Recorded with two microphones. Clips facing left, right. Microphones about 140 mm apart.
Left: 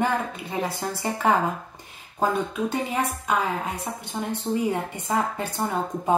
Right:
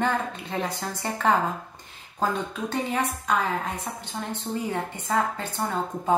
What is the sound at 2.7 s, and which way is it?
A woman's voice, 10° left (ahead or behind).